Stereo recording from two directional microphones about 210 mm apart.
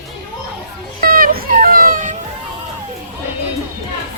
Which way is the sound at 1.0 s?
45° right (ahead or behind).